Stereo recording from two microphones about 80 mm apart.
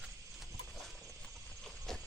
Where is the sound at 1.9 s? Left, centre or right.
Centre.